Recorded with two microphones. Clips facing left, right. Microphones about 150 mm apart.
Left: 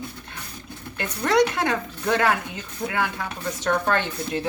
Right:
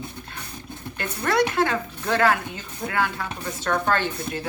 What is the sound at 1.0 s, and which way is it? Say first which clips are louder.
Speech: left 2 dB; 20° left (ahead or behind).